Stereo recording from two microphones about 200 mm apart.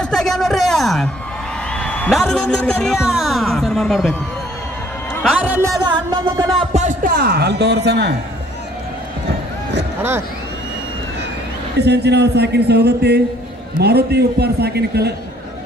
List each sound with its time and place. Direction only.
0.0 s a sound: centre (ahead or behind)
1.8 s a man's voice: 5° left (ahead or behind)
5.3 s music: 5° right (ahead or behind)
6.7 s speech: 40° right (ahead or behind); by 8.2 s 55° right (ahead or behind)
11.8 s a man's voice: 55° right (ahead or behind)